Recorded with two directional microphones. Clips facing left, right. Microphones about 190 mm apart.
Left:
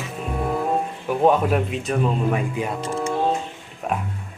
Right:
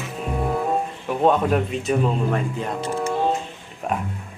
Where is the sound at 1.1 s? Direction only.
5° left (ahead or behind).